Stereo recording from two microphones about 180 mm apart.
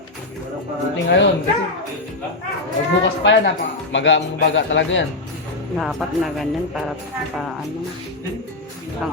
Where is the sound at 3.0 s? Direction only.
85° left.